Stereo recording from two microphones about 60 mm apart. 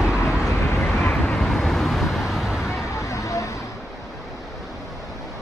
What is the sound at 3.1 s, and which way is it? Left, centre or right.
Vehicle, left.